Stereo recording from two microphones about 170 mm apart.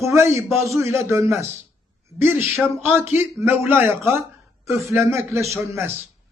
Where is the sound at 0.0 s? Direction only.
15° right (ahead or behind).